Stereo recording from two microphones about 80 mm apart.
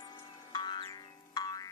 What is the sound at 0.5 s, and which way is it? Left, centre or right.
Music, left.